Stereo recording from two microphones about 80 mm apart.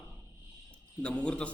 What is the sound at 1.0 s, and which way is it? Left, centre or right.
Speech, centre.